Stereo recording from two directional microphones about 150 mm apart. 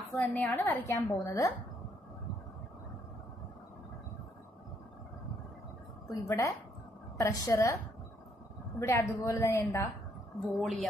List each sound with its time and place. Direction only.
0.1 s a woman's voice: 10° left (ahead or behind)
6.0 s a woman's voice: 20° left (ahead or behind)
8.7 s a woman's voice: 20° left (ahead or behind)
10.4 s a woman's voice: centre (ahead or behind)